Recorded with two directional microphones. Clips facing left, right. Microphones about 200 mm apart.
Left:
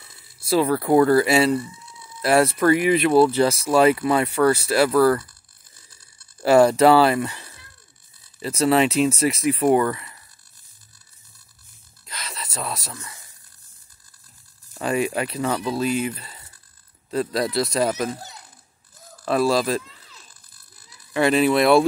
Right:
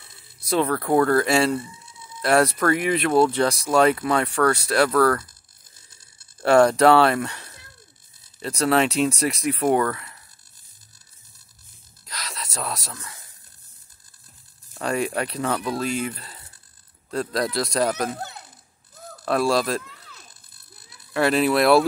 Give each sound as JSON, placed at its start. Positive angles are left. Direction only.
{"t": 0.5, "sound": "speech", "side_deg": 5}
{"t": 6.4, "sound": "speech", "side_deg": 5}
{"t": 12.1, "sound": "a sound", "side_deg": 0}
{"t": 14.7, "sound": "speech", "side_deg": 0}
{"t": 19.2, "sound": "speech", "side_deg": 0}
{"t": 19.8, "sound": "a sound", "side_deg": -60}
{"t": 21.1, "sound": "speech", "side_deg": 0}